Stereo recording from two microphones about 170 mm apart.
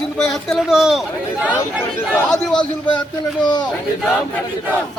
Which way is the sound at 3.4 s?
25° left (ahead or behind).